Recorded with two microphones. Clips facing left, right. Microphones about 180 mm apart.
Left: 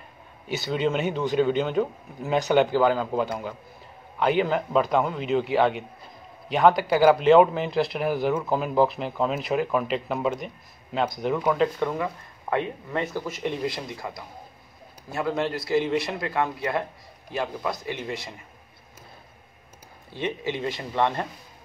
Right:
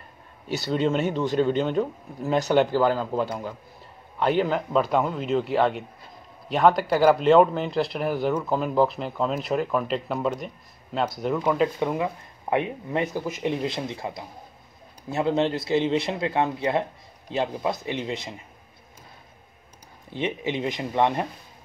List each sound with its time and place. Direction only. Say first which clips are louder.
0.5 s speech: right 1 dB; centre (ahead or behind)
11.8 s speech: right 1 dB; 15° right (ahead or behind)
20.1 s speech: right 1 dB; 20° right (ahead or behind)